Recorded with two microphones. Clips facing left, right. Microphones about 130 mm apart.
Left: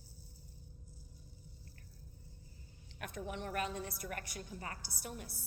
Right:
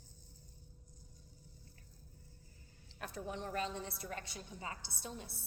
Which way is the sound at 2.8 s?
30° right (ahead or behind).